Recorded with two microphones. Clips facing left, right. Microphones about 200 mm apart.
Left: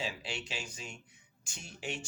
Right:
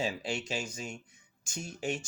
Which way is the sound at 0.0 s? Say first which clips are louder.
Right 6 dB; 45° right (ahead or behind).